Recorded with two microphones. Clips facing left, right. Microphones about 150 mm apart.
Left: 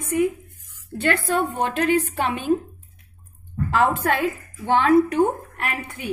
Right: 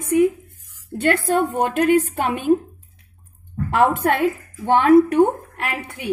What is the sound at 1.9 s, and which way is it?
Speech, 50° right (ahead or behind).